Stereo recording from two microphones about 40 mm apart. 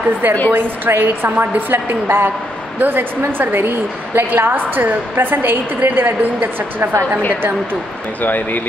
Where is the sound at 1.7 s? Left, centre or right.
Right.